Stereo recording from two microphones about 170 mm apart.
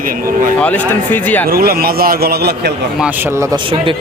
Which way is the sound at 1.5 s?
65° right (ahead or behind).